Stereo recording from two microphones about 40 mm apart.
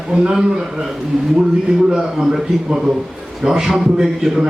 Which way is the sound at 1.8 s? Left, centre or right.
Centre.